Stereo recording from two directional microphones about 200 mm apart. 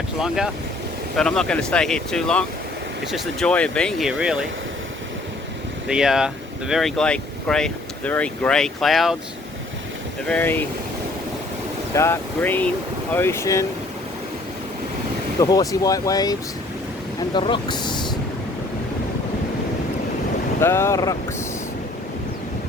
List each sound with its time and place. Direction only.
0.2 s speech: 5° right (ahead or behind)
5.9 s speech: 5° right (ahead or behind)
10.2 s speech: 10° left (ahead or behind)
11.9 s speech: 10° left (ahead or behind)
15.4 s speech: 20° left (ahead or behind)
20.6 s speech: 10° left (ahead or behind)